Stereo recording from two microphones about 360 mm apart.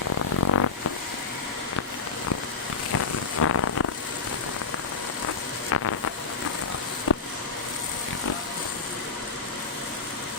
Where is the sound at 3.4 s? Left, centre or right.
Left.